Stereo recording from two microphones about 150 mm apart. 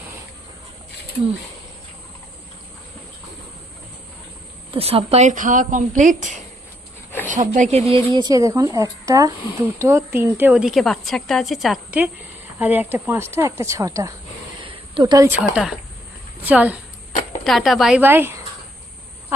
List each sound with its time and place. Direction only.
4.7 s a woman's voice: 40° right (ahead or behind)
5.3 s speech: 60° right (ahead or behind); by 8.0 s 45° right (ahead or behind)
8.1 s a woman's voice: 25° right (ahead or behind)
14.6 s a sound: 30° right (ahead or behind)
15.3 s a woman's voice: 5° right (ahead or behind)
17.4 s a woman's voice: centre (ahead or behind)